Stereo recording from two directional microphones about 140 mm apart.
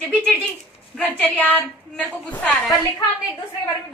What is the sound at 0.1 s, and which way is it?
A woman's voice, 5° left (ahead or behind).